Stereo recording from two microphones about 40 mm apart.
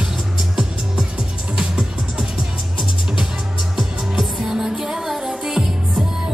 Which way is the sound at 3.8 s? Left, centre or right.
Centre.